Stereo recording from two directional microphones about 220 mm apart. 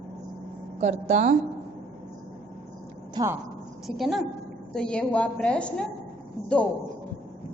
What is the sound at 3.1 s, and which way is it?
Speech, 15° right (ahead or behind).